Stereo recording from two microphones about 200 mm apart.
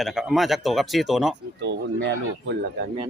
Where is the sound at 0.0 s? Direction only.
Centre (ahead or behind).